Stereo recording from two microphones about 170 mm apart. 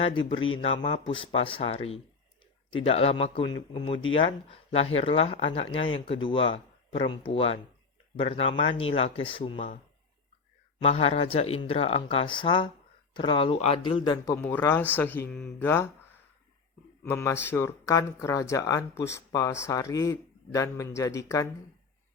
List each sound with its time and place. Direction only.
0.0 s speech: 30° left (ahead or behind)
10.8 s speech: 35° left (ahead or behind)
14.4 s speech: 15° left (ahead or behind)
17.0 s speech: 15° left (ahead or behind)